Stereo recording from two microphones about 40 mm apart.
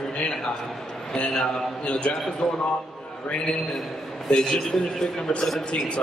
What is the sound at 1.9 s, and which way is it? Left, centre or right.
Speech, left.